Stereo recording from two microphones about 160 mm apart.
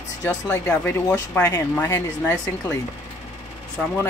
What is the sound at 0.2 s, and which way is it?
Speech, 20° left (ahead or behind).